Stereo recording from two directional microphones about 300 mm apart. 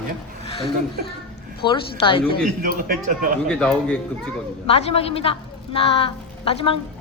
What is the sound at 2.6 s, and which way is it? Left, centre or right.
Speech, right.